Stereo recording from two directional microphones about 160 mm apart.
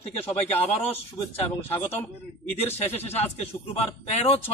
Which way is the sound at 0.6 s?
35° left (ahead or behind).